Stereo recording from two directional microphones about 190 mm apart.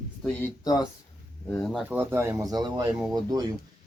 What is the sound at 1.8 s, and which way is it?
Speech, 10° right (ahead or behind).